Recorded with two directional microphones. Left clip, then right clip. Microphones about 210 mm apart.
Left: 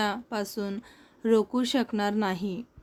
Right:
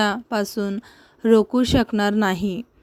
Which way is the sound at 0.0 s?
35° right (ahead or behind).